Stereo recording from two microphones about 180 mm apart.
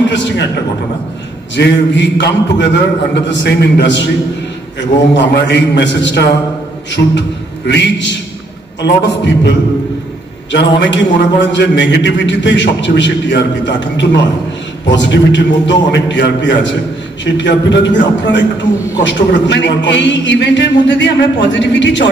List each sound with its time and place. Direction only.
0.1 s a man's voice: 85° left
1.6 s a man's voice: 75° left (ahead or behind)